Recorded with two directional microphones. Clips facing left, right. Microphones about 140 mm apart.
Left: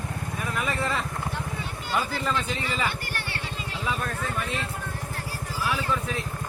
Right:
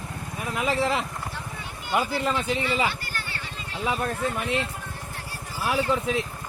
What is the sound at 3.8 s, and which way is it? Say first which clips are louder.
Speech: right 4 dB; 30° right (ahead or behind).